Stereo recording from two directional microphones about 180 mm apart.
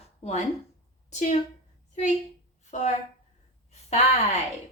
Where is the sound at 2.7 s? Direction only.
40° left (ahead or behind).